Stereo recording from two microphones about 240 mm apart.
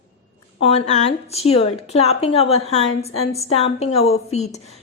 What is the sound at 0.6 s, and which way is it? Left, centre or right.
A woman's voice, left.